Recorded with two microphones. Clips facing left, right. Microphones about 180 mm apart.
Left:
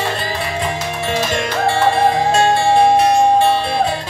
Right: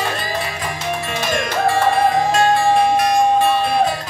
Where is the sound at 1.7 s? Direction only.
30° left (ahead or behind).